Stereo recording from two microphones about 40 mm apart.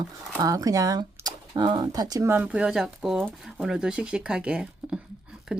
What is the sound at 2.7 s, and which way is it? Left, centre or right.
A woman's voice, centre.